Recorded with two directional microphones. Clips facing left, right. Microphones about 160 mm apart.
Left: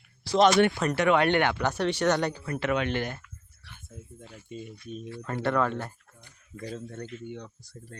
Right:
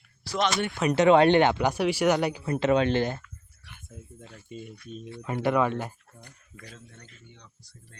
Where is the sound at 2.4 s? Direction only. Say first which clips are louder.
Right 5 dB; 25° right (ahead or behind).